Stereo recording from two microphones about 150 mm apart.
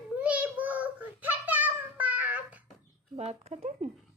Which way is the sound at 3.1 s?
45° right (ahead or behind).